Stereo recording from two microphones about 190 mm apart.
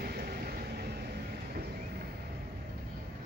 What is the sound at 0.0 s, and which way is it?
Vehicle, 55° right (ahead or behind).